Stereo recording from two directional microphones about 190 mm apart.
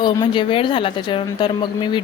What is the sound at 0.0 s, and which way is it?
Speech, 25° left (ahead or behind).